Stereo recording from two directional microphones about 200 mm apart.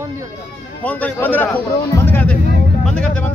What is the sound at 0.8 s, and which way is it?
Speech, 10° left (ahead or behind).